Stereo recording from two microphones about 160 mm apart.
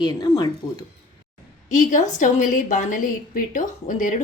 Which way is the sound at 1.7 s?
50° left (ahead or behind).